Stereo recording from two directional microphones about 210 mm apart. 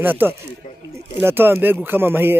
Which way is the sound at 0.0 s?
10° right (ahead or behind).